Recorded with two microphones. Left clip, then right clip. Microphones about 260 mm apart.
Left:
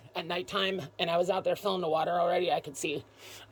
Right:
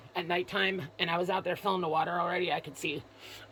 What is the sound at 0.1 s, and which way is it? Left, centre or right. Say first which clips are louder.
Speech: right 1 dB; centre.